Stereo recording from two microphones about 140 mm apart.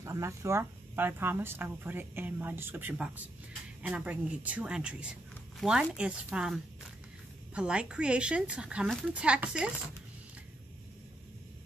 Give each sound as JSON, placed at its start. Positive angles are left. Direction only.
{"t": 0.0, "sound": "speech", "side_deg": -20}